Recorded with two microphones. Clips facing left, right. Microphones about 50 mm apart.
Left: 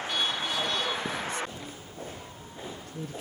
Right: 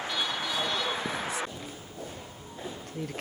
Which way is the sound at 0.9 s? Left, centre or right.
Right.